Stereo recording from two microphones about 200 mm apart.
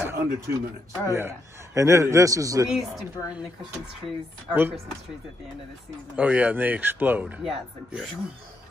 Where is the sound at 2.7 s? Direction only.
Centre (ahead or behind).